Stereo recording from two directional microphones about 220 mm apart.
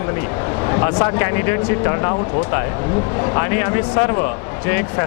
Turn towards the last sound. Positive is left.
turn(degrees=15)  # may be behind; listen again after turning